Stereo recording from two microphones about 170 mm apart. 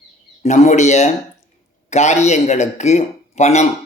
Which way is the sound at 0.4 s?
45° left (ahead or behind).